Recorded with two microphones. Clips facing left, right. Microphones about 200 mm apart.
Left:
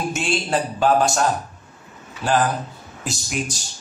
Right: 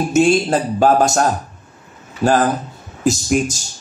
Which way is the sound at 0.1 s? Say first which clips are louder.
Right 9 dB; 40° right (ahead or behind).